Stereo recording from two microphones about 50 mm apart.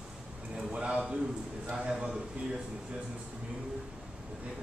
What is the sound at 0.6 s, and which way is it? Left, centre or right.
A man's voice, centre.